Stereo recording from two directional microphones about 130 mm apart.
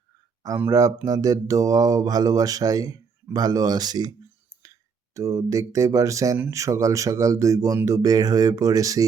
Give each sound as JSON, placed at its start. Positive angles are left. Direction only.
{"t": 0.7, "sound": "speech", "side_deg": -25}
{"t": 5.1, "sound": "speech", "side_deg": -25}